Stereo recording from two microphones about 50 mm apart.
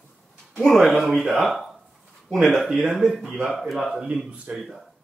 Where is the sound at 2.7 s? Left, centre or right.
Centre.